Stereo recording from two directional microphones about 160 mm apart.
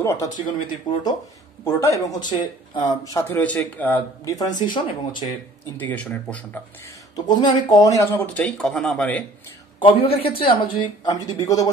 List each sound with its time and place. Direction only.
0.0 s speech: 15° left (ahead or behind)
0.9 s speech: 25° left (ahead or behind)
1.6 s speech: 15° left (ahead or behind)
4.2 s speech: 20° left (ahead or behind)
5.8 s speech: 10° left (ahead or behind)
7.2 s speech: 25° left (ahead or behind); by 9.2 s 10° left (ahead or behind)
9.8 s speech: 35° left (ahead or behind)